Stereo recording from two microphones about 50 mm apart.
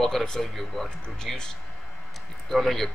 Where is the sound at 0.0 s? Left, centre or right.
Centre.